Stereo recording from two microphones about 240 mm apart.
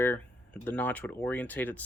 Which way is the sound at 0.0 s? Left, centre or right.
Centre.